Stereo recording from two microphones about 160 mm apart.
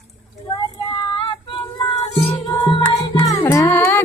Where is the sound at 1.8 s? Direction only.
30° left (ahead or behind).